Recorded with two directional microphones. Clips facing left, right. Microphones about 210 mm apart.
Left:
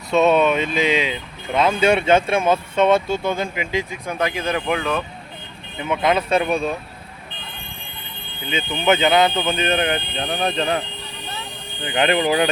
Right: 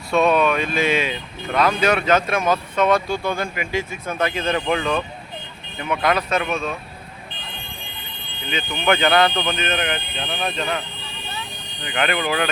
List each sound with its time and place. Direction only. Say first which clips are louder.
0.1 s speech: left 2 dB; 25° left (ahead or behind); by 5.0 s 5° left (ahead or behind)
5.8 s speech: left 1 dB; 20° left (ahead or behind)
8.4 s speech: left 2 dB; 20° left (ahead or behind)
9.6 s speech: left 4 dB; 30° left (ahead or behind)
11.9 s speech: left 4 dB; 25° left (ahead or behind)